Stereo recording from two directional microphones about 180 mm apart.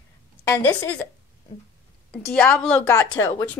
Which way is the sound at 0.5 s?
10° left (ahead or behind).